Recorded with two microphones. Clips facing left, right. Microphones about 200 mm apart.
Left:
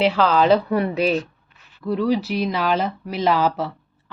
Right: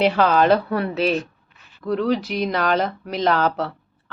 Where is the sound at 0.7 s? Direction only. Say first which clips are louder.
Left 1 dB; 10° left (ahead or behind).